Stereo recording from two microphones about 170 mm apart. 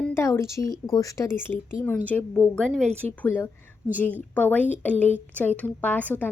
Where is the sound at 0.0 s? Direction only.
15° left (ahead or behind).